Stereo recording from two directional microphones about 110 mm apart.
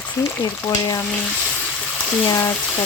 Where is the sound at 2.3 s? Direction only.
30° left (ahead or behind).